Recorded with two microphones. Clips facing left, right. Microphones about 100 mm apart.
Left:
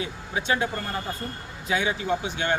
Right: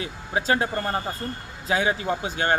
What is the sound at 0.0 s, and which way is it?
Speech, 40° right (ahead or behind).